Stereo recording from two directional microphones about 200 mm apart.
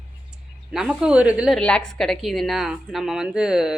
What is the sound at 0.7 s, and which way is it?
A woman's voice, 5° right (ahead or behind).